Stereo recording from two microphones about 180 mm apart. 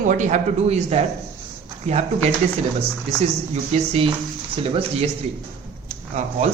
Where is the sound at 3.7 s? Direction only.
30° right (ahead or behind).